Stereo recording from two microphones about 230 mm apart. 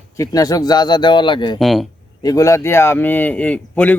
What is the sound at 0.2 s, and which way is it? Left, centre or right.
Speech, centre.